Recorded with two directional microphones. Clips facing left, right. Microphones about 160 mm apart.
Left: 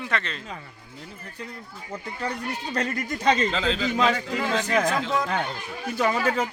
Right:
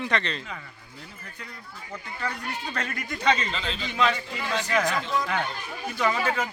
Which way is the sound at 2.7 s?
40° left (ahead or behind).